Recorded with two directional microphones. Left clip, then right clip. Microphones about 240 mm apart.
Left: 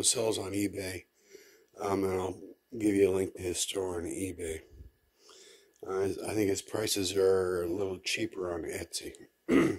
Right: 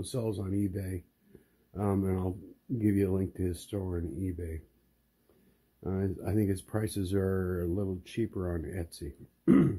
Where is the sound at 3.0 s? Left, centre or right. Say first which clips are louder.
Left 4 dB; left.